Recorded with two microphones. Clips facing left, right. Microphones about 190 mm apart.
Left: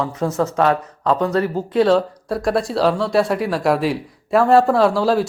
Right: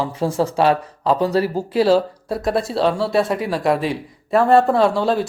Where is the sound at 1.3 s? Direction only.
5° right (ahead or behind).